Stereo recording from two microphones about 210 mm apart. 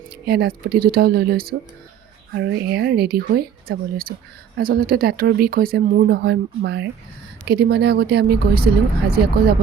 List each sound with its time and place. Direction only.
0.3 s speech: 50° right (ahead or behind)